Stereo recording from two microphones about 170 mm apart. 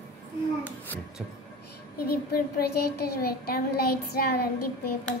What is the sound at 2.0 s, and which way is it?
Speech, 65° left (ahead or behind).